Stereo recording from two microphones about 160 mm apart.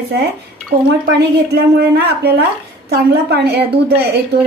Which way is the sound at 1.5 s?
90° right.